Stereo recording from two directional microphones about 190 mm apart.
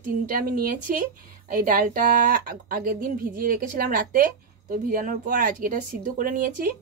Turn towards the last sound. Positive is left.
turn(degrees=-45)  # may be behind; listen again after turning